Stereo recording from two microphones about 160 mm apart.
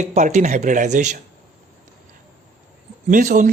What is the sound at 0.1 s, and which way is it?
Speech, 45° right (ahead or behind).